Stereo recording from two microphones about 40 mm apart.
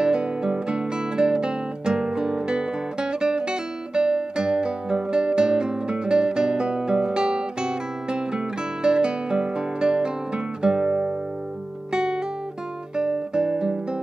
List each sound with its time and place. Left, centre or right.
0.0 s guitar: right
8.8 s music: right
12.9 s guitar: centre